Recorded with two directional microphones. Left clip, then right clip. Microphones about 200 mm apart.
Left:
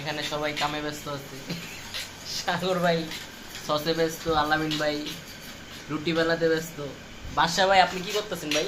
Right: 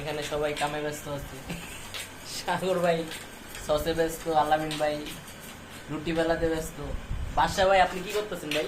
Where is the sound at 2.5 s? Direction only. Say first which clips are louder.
Left 1 dB; 15° left (ahead or behind).